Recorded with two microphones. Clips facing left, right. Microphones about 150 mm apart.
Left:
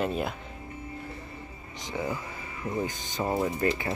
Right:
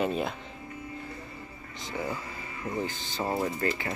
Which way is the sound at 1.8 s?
15° left (ahead or behind).